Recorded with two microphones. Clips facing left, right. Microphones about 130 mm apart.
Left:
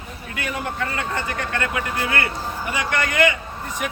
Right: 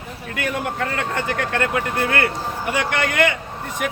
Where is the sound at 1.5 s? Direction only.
45° right (ahead or behind).